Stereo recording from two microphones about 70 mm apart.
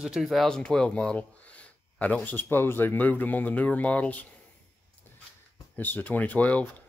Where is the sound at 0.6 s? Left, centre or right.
Centre.